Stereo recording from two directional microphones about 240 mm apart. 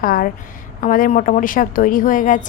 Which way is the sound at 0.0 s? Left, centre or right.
Left.